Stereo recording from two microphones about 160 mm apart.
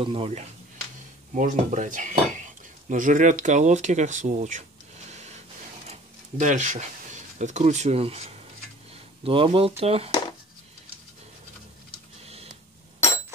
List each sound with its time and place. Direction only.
0.0 s speech: 35° right (ahead or behind)
1.3 s dishes: 55° right (ahead or behind)
5.9 s speech: 50° right (ahead or behind)
12.3 s a sound: 40° right (ahead or behind)